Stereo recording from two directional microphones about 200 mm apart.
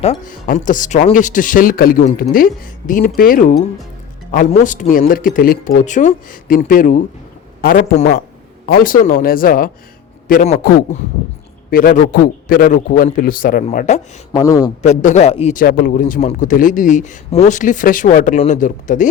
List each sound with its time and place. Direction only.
0.0 s a man's voice: 35° left (ahead or behind)
4.5 s speech: 40° left (ahead or behind)
11.7 s speech: 45° left (ahead or behind)
14.3 s a man's voice: 20° left (ahead or behind)
14.8 s a man's voice: 35° left (ahead or behind)